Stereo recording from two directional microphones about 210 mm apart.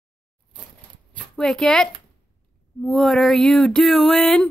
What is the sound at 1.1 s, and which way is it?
Speech, 5° left (ahead or behind).